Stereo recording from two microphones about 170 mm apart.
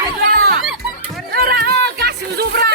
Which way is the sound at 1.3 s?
65° right (ahead or behind).